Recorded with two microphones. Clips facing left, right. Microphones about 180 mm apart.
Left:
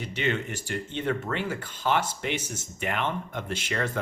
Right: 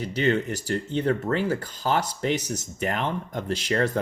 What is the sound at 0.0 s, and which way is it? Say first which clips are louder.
Speech: right 5 dB; 40° right (ahead or behind).